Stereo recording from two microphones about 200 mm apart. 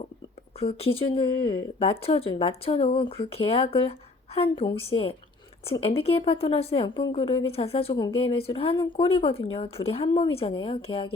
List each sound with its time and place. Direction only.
0.6 s a woman's voice: 30° left (ahead or behind)